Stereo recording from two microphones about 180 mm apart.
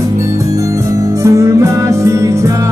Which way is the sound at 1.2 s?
15° right (ahead or behind).